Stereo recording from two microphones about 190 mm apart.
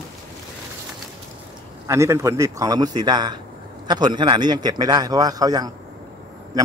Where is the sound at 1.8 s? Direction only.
15° right (ahead or behind).